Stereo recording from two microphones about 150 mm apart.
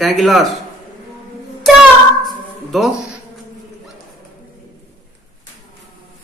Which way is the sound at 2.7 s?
Centre (ahead or behind).